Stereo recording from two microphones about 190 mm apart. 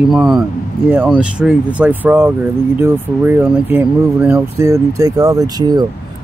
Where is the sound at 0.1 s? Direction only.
Centre (ahead or behind).